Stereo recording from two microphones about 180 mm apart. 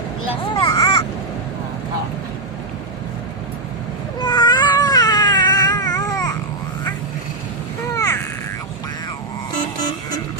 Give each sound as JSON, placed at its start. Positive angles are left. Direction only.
{"t": 0.3, "sound": "speech", "side_deg": 30}
{"t": 0.7, "sound": "vehicle", "side_deg": 20}
{"t": 4.2, "sound": "cat", "side_deg": 25}
{"t": 7.9, "sound": "a sound", "side_deg": 15}